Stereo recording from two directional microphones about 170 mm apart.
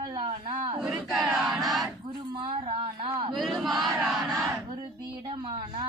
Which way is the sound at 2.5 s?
40° right (ahead or behind).